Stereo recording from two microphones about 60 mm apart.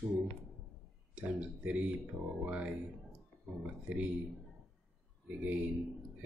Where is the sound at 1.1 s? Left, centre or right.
Right.